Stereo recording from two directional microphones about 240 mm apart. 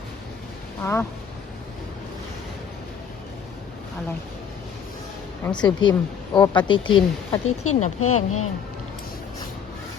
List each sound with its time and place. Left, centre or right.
0.8 s speech: centre
5.5 s a woman's voice: centre
7.4 s speech: left